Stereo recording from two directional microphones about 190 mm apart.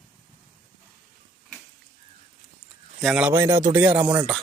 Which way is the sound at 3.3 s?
20° right (ahead or behind).